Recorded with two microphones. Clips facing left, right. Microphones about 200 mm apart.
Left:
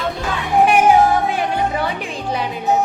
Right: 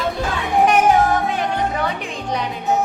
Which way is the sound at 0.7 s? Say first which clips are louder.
Left 3 dB; 10° left (ahead or behind).